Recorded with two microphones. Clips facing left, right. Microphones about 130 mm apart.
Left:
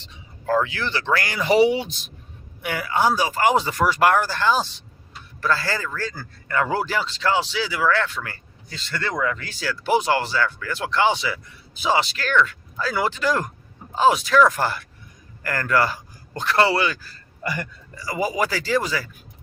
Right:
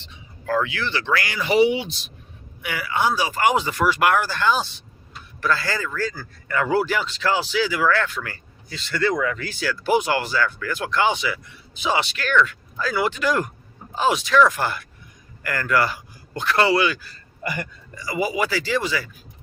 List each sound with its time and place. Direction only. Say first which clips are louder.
0.4 s speech: left 2 dB; 25° left (ahead or behind)
0.7 s speech: even; 40° left (ahead or behind)